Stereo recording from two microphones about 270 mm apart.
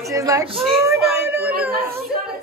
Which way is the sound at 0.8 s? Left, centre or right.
Centre.